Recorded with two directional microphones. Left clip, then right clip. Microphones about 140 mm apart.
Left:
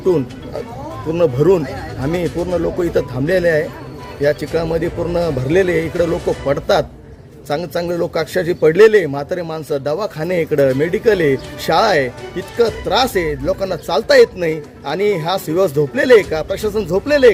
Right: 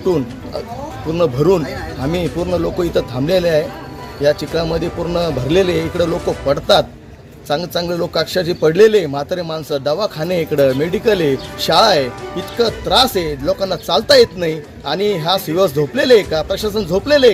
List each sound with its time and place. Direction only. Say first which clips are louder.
0.0 s speech: left 1 dB; 10° left (ahead or behind)
10.9 s speech: left 1 dB; 45° left (ahead or behind)
11.7 s speech: right 1 dB; 10° left (ahead or behind)